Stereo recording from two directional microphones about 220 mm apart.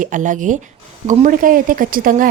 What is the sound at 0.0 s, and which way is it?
A woman's voice, 35° right (ahead or behind).